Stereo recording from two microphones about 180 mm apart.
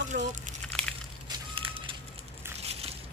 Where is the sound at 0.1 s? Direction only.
55° right (ahead or behind).